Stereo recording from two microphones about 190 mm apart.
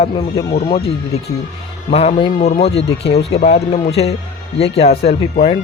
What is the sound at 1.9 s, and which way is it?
Speech, 30° left (ahead or behind).